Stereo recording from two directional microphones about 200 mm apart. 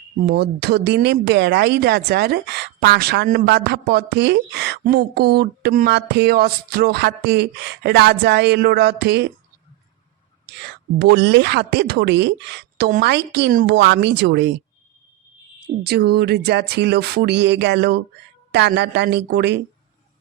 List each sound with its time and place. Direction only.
0.3 s speech: 55° right (ahead or behind)
10.6 s speech: 55° right (ahead or behind)
13.5 s speech: 45° right (ahead or behind)
13.7 s speech: 60° right (ahead or behind)
15.6 s speech: 55° right (ahead or behind)